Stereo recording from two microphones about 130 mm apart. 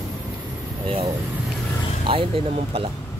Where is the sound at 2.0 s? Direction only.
45° right (ahead or behind).